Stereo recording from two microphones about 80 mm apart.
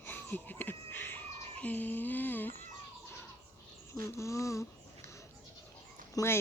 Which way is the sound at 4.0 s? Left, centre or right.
Left.